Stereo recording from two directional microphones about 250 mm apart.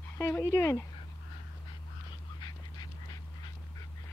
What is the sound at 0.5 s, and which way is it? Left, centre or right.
Speech, centre.